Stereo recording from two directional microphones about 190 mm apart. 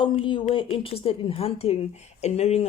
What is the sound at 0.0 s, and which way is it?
A woman's voice, 25° left (ahead or behind).